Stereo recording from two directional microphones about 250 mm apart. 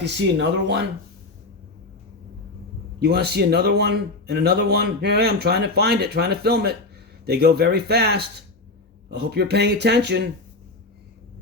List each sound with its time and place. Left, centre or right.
0.0 s speech: right
3.0 s speech: right